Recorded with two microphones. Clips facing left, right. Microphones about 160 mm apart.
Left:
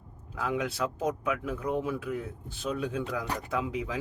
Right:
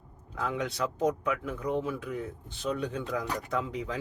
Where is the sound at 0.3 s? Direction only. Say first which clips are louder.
Left 1 dB; 10° left (ahead or behind).